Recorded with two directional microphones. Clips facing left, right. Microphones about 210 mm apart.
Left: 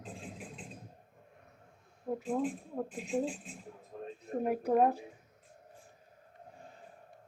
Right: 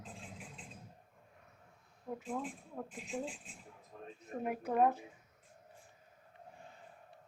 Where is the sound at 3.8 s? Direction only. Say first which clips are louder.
Left 6 dB; 35° left (ahead or behind).